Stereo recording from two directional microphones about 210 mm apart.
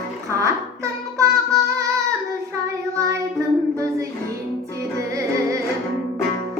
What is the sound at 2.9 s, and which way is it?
Child singing, 15° right (ahead or behind).